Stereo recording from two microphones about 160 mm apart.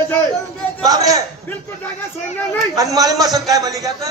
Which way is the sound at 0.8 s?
20° right (ahead or behind).